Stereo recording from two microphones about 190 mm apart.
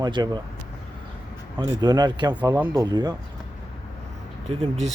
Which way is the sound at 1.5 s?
20° right (ahead or behind).